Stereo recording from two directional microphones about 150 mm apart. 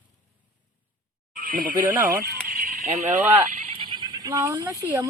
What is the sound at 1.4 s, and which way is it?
Speech, 65° right (ahead or behind).